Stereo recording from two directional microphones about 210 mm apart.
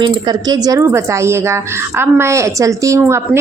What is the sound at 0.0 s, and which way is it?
A woman's voice, 20° right (ahead or behind).